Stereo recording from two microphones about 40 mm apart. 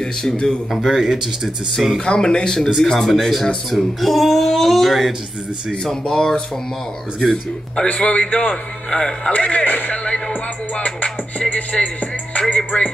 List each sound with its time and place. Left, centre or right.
0.0 s speech: centre
0.7 s speech: centre
2.0 s a man's voice: centre
5.7 s a man's voice: centre; by 11.6 s left
11.7 s music: left